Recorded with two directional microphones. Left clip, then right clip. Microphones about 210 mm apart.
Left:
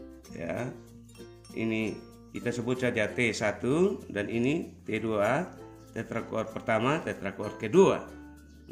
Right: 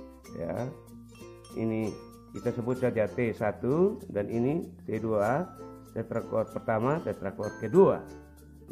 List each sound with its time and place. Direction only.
0.4 s music: 25° right (ahead or behind)
1.6 s speech: 30° right (ahead or behind)